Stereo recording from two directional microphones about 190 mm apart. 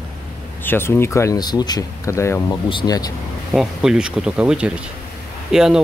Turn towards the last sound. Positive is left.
turn(degrees=0)  # may be behind; listen again after turning